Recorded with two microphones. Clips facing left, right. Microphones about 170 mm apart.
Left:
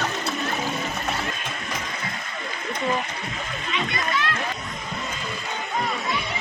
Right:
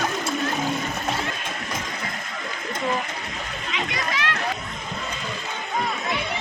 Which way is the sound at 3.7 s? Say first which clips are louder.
Left 2 dB; 90° right.